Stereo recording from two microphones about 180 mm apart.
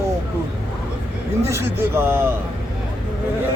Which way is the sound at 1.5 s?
15° right (ahead or behind).